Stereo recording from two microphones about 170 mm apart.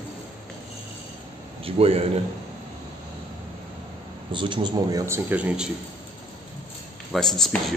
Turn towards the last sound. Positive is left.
turn(degrees=0)  # may be behind; listen again after turning